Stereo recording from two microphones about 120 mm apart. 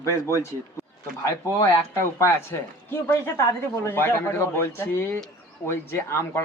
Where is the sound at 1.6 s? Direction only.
20° left (ahead or behind).